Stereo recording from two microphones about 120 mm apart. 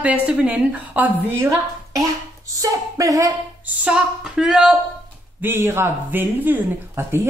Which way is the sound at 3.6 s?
10° right (ahead or behind).